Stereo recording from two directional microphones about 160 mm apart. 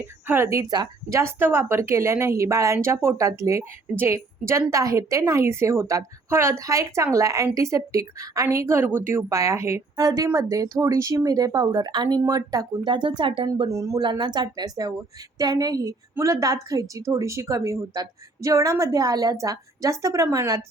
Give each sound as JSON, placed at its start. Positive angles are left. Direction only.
{"t": 0.0, "sound": "a woman's voice", "side_deg": -15}